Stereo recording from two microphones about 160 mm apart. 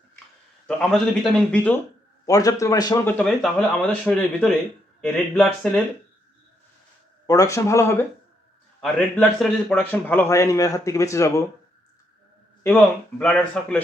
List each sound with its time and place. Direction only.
0.8 s speech: 5° left (ahead or behind)
2.2 s speech: 20° left (ahead or behind)
3.0 s speech: 10° left (ahead or behind)
7.3 s speech: 20° left (ahead or behind)
8.8 s speech: 5° left (ahead or behind)
9.8 s speech: 10° left (ahead or behind)
12.7 s speech: 10° left (ahead or behind)